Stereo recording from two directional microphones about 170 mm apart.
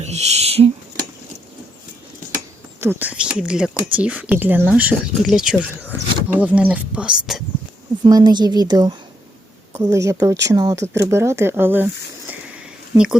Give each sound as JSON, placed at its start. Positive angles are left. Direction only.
{"t": 0.0, "sound": "owl", "side_deg": -40}
{"t": 2.8, "sound": "speech", "side_deg": -10}
{"t": 8.0, "sound": "a woman's voice", "side_deg": -25}
{"t": 12.9, "sound": "a woman's voice", "side_deg": -20}